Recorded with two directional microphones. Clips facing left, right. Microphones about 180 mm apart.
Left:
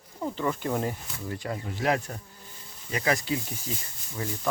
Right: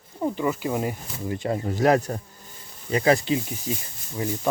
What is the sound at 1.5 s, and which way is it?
Speech, 40° right (ahead or behind).